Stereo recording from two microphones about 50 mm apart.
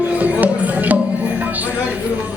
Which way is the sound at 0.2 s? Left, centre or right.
Right.